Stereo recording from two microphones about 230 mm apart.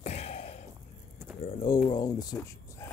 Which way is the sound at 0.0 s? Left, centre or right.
Left.